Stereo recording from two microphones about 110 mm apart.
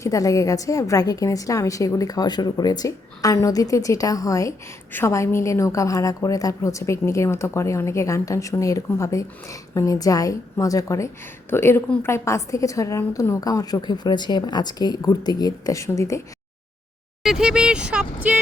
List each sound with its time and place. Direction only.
0.0 s a woman's voice: 30° left (ahead or behind)
17.2 s speech: 5° right (ahead or behind)